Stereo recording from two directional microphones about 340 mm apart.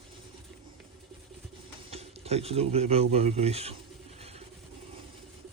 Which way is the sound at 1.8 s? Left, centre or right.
Centre.